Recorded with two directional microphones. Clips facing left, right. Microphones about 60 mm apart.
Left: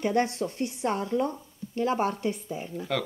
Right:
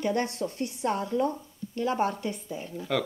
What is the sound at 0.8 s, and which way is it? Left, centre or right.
Speech, left.